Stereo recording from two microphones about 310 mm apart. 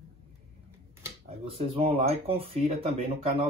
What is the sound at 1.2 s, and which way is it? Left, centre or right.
Speech, centre.